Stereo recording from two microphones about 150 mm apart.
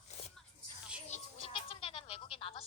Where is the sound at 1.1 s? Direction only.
40° left (ahead or behind).